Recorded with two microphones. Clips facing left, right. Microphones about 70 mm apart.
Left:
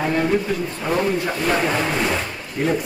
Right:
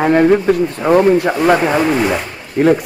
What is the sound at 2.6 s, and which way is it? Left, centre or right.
Speech, right.